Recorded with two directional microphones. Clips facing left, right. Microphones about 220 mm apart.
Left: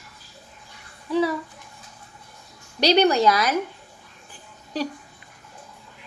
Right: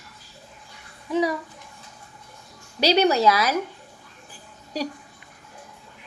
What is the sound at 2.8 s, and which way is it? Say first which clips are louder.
Speech: left 1 dB; 5° right (ahead or behind).